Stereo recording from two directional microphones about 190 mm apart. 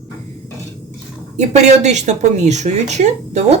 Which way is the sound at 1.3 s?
35° right (ahead or behind).